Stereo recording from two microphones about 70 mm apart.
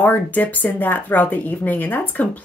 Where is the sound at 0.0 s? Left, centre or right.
Left.